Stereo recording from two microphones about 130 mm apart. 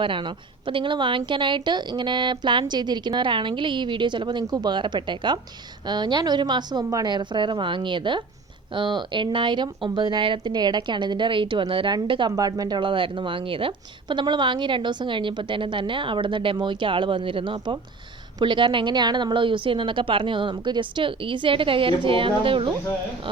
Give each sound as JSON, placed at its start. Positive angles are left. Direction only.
{"t": 0.0, "sound": "speech", "side_deg": -40}